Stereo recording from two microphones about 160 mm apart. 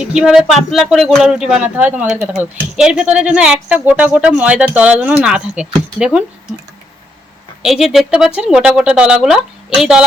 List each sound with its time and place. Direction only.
0.0 s speech: 5° right (ahead or behind)
7.6 s speech: centre (ahead or behind)